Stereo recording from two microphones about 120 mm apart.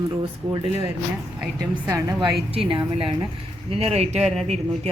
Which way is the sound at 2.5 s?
50° right (ahead or behind).